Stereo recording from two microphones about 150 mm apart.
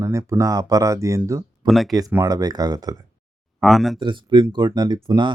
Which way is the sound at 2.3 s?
25° right (ahead or behind).